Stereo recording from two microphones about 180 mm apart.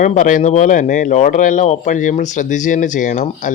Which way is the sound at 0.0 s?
45° left (ahead or behind).